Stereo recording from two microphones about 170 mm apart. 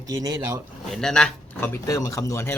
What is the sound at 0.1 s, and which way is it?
Speech, 20° right (ahead or behind).